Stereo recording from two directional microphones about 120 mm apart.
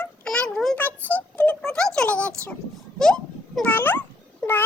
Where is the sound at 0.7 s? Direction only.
15° left (ahead or behind).